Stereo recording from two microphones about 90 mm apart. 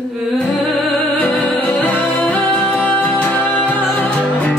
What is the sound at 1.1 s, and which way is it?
Music, 20° left (ahead or behind).